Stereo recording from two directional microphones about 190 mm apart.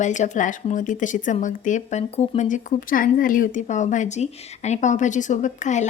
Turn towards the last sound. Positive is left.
turn(degrees=40)  # may be behind; listen again after turning